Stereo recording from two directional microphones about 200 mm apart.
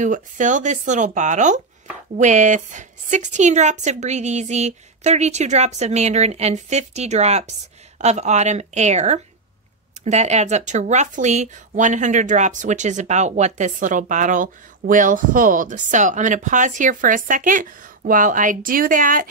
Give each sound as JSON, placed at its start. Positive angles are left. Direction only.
{"t": 0.0, "sound": "speech", "side_deg": -40}